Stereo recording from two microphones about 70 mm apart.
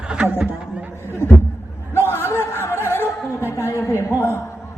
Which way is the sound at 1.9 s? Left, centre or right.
Left.